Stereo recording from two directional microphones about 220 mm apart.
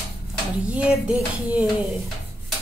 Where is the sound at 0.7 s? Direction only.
5° right (ahead or behind).